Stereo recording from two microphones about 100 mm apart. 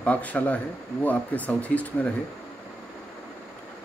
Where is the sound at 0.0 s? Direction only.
15° left (ahead or behind).